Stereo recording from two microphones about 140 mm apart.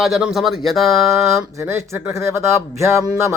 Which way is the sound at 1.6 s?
20° right (ahead or behind).